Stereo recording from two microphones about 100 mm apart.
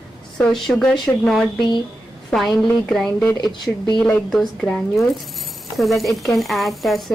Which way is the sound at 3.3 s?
45° left (ahead or behind).